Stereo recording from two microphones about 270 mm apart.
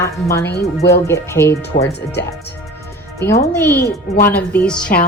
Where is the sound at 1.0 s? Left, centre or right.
Centre.